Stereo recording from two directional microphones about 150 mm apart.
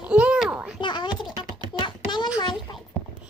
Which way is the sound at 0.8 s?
30° left (ahead or behind).